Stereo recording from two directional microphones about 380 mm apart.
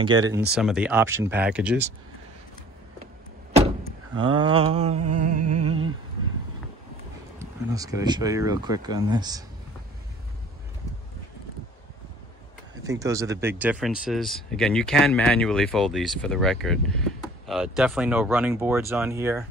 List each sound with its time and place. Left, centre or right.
0.0 s speech: centre
3.5 s vehicle: centre
5.1 s music: centre
5.5 s humming: right
7.3 s speech: centre
12.8 s speech: centre